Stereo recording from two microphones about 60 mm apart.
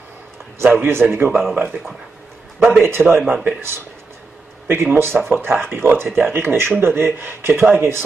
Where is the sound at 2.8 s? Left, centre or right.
Right.